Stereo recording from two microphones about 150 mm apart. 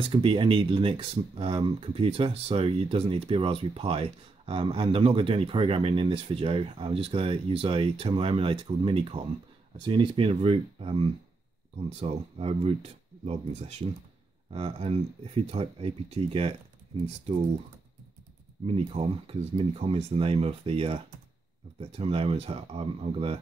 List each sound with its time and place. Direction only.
0.0 s speech: 40° right (ahead or behind)
18.7 s speech: 40° right (ahead or behind)